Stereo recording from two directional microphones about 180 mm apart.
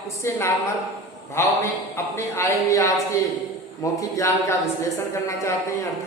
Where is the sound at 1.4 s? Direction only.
15° left (ahead or behind).